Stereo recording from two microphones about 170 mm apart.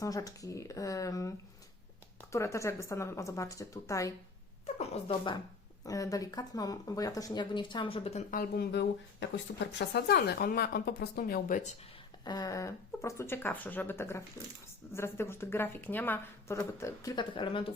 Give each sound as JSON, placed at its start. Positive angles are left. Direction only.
{"t": 0.0, "sound": "speech", "side_deg": 20}
{"t": 2.3, "sound": "speech", "side_deg": 15}
{"t": 4.6, "sound": "speech", "side_deg": 35}
{"t": 5.8, "sound": "speech", "side_deg": 20}
{"t": 8.3, "sound": "speech", "side_deg": 65}
{"t": 12.2, "sound": "speech", "side_deg": 25}